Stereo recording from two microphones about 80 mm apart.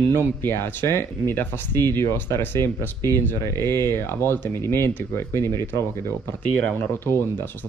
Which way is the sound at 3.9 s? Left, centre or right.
Left.